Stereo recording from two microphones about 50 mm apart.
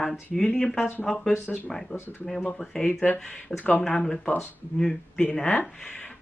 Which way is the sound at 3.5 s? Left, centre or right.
Left.